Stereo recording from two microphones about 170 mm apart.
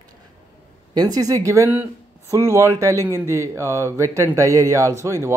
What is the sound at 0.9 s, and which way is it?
Speech, 20° right (ahead or behind).